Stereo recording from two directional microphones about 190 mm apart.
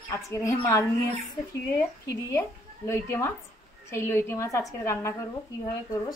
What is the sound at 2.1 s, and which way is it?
Speech, 15° left (ahead or behind).